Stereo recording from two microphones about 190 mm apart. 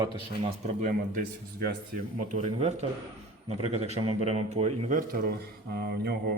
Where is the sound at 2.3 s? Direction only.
35° right (ahead or behind).